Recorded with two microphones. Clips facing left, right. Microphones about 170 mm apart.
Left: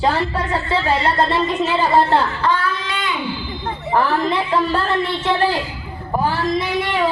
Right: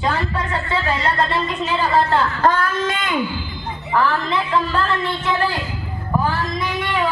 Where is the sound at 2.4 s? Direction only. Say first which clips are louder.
Right 2 dB; 45° right (ahead or behind).